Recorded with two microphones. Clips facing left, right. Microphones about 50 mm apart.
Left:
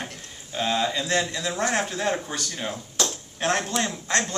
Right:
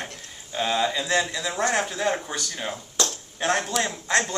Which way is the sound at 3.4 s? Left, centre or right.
Centre.